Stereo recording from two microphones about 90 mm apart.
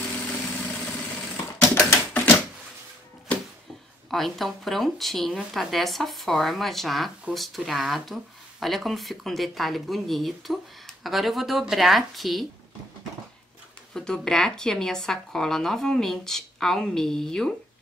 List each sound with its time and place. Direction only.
0.3 s vehicle: 15° left (ahead or behind)
1.3 s typewriter: 35° left (ahead or behind)
4.1 s speech: centre (ahead or behind)
13.9 s speech: 5° left (ahead or behind)